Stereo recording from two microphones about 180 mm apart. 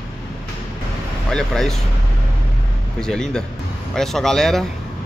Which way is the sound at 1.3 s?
Centre (ahead or behind).